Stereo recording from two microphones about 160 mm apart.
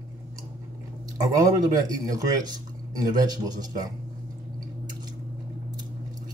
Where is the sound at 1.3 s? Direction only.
20° right (ahead or behind).